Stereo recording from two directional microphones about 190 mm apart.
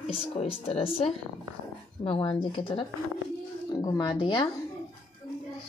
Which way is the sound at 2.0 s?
25° left (ahead or behind).